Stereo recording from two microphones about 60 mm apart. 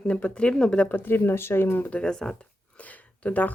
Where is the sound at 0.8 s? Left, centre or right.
Left.